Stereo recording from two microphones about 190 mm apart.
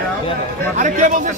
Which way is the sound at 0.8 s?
40° right (ahead or behind).